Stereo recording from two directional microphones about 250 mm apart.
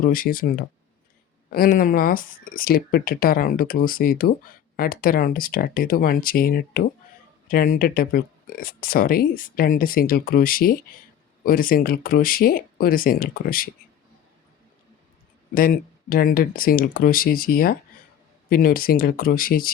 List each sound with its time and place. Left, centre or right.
0.1 s speech: left
15.5 s speech: left